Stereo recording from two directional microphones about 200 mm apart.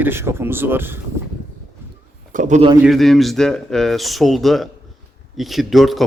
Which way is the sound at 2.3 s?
35° right (ahead or behind).